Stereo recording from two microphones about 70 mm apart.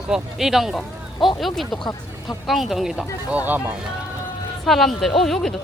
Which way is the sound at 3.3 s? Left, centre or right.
Right.